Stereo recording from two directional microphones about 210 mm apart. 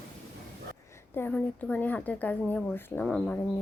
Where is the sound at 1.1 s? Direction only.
10° left (ahead or behind).